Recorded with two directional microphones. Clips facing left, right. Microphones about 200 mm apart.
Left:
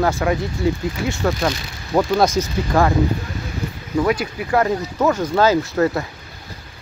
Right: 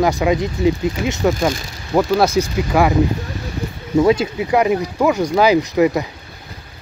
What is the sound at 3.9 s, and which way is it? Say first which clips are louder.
Speech: right 5 dB; 25° right (ahead or behind).